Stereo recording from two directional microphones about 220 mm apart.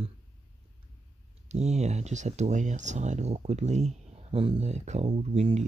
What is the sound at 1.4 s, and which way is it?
Speech, 30° right (ahead or behind).